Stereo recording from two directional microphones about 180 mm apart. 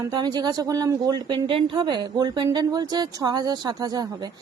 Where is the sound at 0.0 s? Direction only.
20° right (ahead or behind).